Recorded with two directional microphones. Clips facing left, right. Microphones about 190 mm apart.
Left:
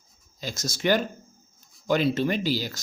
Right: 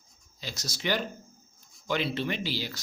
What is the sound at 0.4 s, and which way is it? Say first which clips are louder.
Speech: left 7 dB; 50° left (ahead or behind).